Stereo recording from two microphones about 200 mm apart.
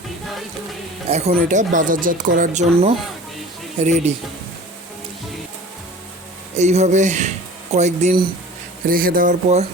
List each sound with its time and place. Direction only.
1.3 s speech: 40° right (ahead or behind)
6.6 s speech: 35° right (ahead or behind)
8.9 s speech: 45° right (ahead or behind)